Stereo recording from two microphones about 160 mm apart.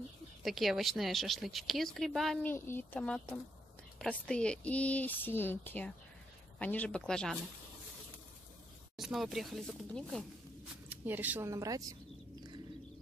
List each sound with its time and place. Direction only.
0.4 s a woman's voice: centre (ahead or behind)
2.4 s speech: 15° left (ahead or behind)
8.9 s a woman's voice: centre (ahead or behind)
10.9 s speech: 10° right (ahead or behind)